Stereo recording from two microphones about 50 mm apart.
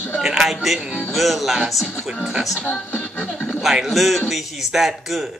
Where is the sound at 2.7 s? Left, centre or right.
Left.